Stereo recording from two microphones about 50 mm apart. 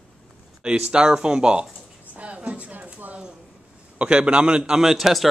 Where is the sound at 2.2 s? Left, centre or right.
Right.